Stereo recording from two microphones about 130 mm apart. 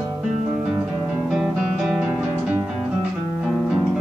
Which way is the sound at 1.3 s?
5° right (ahead or behind).